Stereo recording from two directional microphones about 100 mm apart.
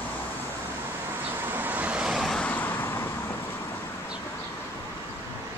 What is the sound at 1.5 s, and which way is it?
Vehicle, 20° right (ahead or behind).